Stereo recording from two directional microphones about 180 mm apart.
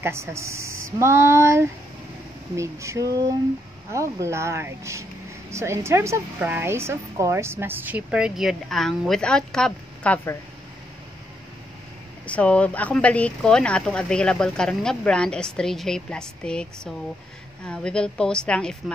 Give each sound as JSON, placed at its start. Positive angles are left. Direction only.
{"t": 0.0, "sound": "a woman's voice", "side_deg": -15}
{"t": 12.3, "sound": "speech", "side_deg": 5}